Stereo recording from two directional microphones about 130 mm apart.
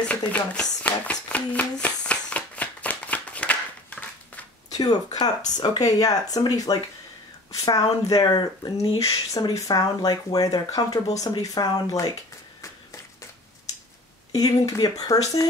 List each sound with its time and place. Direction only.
0.0 s a sound: 10° left (ahead or behind)
4.7 s speech: 30° left (ahead or behind)
9.0 s speech: 25° left (ahead or behind)
14.3 s speech: 30° left (ahead or behind)